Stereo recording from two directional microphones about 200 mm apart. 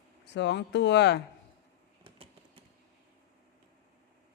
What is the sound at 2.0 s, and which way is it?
Typing, 30° right (ahead or behind).